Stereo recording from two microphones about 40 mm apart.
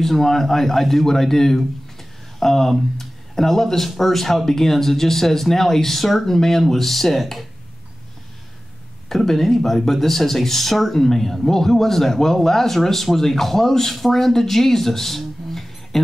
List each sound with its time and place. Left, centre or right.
0.0 s speech: centre
9.1 s speech: centre